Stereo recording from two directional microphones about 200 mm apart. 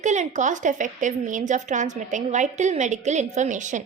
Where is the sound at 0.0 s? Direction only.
35° right (ahead or behind).